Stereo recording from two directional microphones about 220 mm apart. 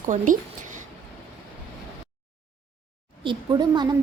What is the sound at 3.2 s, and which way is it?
Speech, 20° right (ahead or behind).